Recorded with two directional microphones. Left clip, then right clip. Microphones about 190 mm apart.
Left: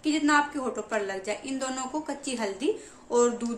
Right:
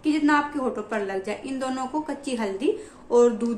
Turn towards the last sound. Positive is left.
turn(degrees=0)  # may be behind; listen again after turning